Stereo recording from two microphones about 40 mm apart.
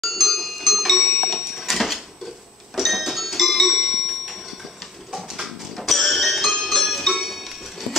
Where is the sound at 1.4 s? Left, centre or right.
Centre.